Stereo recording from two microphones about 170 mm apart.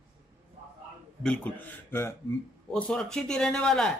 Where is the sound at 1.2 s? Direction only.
5° left (ahead or behind).